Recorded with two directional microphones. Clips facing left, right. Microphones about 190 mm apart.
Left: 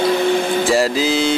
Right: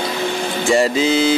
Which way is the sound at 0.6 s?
Centre (ahead or behind).